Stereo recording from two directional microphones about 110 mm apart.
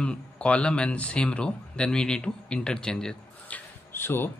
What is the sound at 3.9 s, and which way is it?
Speech, 20° left (ahead or behind).